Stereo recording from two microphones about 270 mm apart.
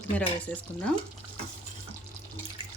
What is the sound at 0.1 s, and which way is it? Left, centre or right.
Speech, centre.